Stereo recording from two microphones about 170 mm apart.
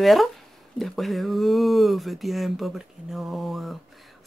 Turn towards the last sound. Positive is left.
turn(degrees=0)  # may be behind; listen again after turning